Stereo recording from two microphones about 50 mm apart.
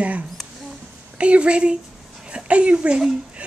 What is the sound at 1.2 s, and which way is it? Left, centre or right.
Music, right.